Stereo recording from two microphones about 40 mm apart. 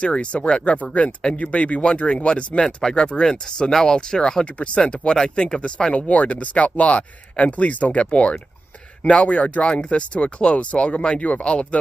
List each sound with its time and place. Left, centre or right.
0.0 s speech: left
1.0 s speech: left
2.6 s speech: centre
4.5 s speech: left; by 5.9 s centre
5.9 s speech: left